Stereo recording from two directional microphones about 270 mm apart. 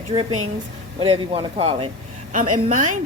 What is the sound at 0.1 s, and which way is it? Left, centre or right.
Speech, centre.